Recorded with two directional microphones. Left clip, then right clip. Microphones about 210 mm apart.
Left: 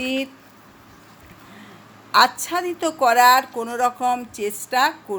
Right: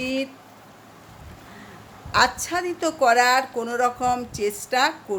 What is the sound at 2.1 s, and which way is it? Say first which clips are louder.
A woman's voice: left 4 dB; centre (ahead or behind).